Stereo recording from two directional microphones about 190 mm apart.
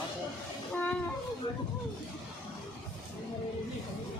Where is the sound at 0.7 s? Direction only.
10° left (ahead or behind).